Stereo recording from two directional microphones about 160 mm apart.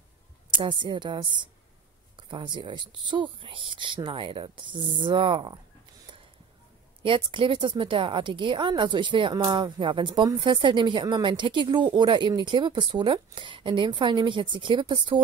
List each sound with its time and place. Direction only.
0.5 s a woman's voice: 30° right (ahead or behind)
7.0 s a woman's voice: 30° right (ahead or behind)